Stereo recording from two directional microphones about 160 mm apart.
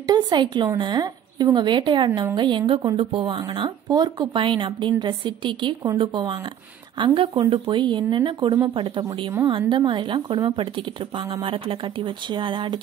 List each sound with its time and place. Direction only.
0.0 s a woman's voice: 25° right (ahead or behind)